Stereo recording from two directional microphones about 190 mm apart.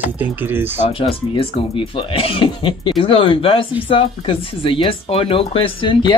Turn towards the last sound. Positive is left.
turn(degrees=25)  # may be behind; listen again after turning